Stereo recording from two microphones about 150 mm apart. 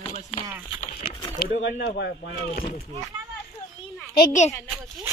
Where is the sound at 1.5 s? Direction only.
90° left.